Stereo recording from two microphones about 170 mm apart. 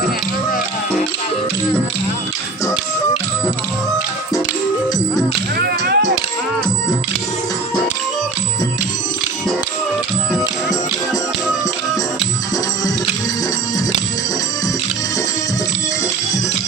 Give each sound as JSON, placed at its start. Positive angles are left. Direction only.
{"t": 5.5, "sound": "whip", "side_deg": -70}